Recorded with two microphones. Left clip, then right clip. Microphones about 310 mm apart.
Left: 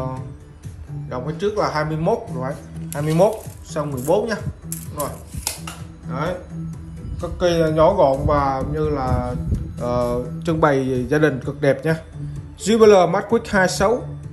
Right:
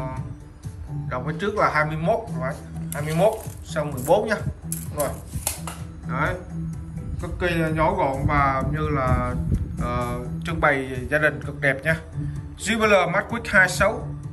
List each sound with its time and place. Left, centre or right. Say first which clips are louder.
1.0 s speech: left 3 dB; centre
3.3 s speech: even; centre